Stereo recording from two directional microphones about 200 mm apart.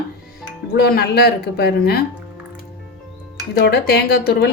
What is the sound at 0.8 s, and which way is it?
A woman's voice, 55° left (ahead or behind).